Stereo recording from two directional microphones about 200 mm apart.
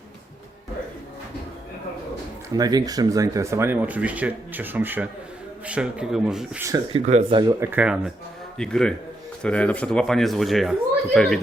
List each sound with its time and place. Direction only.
2.5 s speech: 20° right (ahead or behind)
6.9 s speech: 35° right (ahead or behind)
7.6 s speech: 10° right (ahead or behind)